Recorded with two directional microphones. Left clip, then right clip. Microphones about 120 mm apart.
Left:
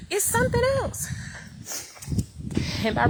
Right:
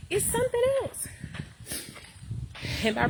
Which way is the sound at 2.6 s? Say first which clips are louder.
Even; 40° right (ahead or behind).